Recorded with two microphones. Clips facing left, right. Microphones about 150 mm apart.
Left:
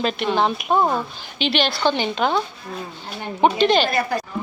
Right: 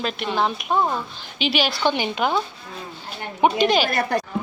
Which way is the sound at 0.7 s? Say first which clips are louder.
Left 4 dB; 20° left (ahead or behind).